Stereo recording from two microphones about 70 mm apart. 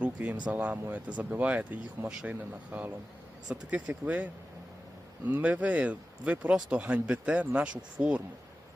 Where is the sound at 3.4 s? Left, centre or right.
Centre.